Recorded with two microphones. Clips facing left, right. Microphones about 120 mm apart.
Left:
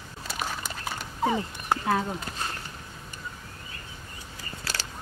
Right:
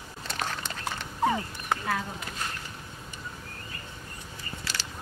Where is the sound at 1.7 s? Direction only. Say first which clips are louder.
Left 4 dB; 30° left (ahead or behind).